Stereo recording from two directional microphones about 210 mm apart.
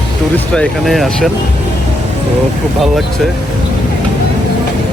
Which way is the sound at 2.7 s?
Centre (ahead or behind).